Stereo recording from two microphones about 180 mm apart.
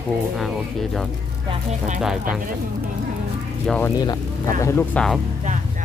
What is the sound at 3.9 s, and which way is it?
Speech, 20° left (ahead or behind).